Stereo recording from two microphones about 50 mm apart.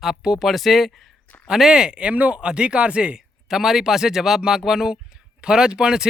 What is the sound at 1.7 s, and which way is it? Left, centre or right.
Speech, centre.